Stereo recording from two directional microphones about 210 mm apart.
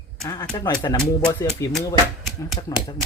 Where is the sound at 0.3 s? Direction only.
20° left (ahead or behind).